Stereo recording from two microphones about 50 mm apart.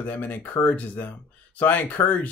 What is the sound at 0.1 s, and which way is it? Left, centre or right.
Speech, left.